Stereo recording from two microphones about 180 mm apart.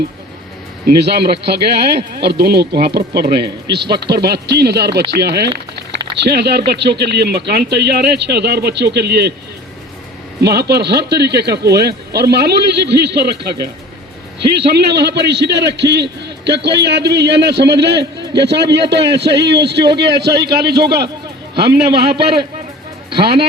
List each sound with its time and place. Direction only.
1.0 s a man's voice: 65° right (ahead or behind)
10.4 s a man's voice: 65° right (ahead or behind)
14.6 s a man's voice: 70° right (ahead or behind)
23.0 s speech: 30° right (ahead or behind)